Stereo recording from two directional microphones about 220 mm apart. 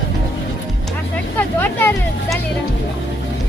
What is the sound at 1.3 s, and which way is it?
Vehicle, 10° left (ahead or behind).